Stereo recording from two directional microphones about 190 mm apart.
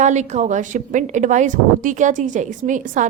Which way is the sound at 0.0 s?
40° right (ahead or behind).